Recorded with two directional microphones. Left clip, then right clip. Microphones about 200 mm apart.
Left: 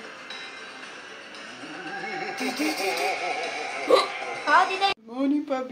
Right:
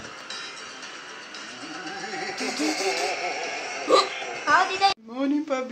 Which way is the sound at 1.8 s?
25° left (ahead or behind).